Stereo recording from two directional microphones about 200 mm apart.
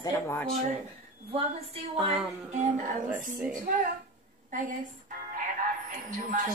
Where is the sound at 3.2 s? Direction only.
40° right (ahead or behind).